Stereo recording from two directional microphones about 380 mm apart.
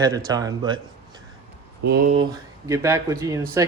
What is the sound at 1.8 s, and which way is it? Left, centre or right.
Speech, right.